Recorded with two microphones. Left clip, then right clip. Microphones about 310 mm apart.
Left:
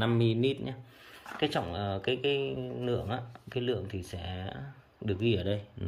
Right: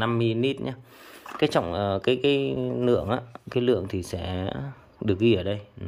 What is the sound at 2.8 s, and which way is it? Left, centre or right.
Speech, centre.